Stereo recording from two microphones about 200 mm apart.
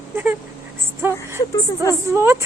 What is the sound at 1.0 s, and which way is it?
Speech, 15° right (ahead or behind).